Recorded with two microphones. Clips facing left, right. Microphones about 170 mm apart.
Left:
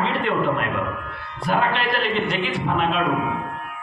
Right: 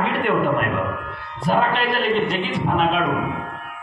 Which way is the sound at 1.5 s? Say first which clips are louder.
Right 2 dB; 40° right (ahead or behind).